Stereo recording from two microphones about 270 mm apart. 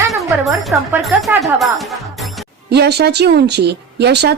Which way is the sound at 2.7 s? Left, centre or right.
Right.